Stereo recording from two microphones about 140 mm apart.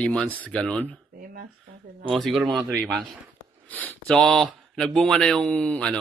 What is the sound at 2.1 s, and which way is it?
Speech, centre (ahead or behind).